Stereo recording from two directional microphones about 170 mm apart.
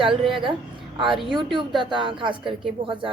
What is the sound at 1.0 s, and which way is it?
A woman's voice, 30° right (ahead or behind).